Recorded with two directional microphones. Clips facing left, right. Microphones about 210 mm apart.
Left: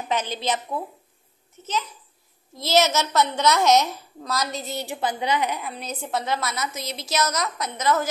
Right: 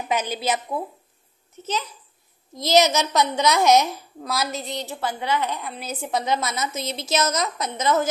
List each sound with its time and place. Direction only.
0.1 s a woman's voice: 10° right (ahead or behind)
2.5 s a woman's voice: 15° right (ahead or behind); by 4.8 s centre (ahead or behind)
4.8 s a woman's voice: 15° left (ahead or behind)
5.6 s a woman's voice: centre (ahead or behind); by 8.1 s 20° right (ahead or behind)